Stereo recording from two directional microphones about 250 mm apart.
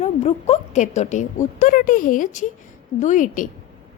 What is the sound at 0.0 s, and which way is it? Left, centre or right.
A woman's voice, left.